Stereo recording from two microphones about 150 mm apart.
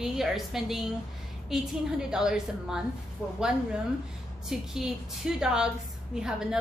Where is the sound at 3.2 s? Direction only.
15° left (ahead or behind).